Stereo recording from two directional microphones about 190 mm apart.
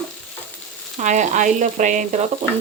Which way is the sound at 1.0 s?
40° right (ahead or behind).